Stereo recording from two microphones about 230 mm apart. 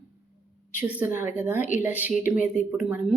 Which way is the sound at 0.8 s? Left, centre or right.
Centre.